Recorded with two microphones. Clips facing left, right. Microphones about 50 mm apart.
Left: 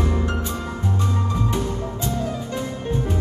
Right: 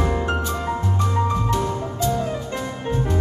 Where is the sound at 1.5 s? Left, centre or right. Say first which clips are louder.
Right 2 dB; left.